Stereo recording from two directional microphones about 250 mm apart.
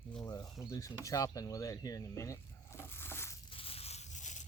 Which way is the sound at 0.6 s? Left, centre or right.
Centre.